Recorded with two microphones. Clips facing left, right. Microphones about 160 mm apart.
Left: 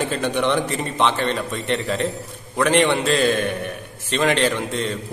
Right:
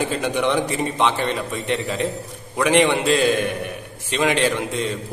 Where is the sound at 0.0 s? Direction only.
10° right (ahead or behind).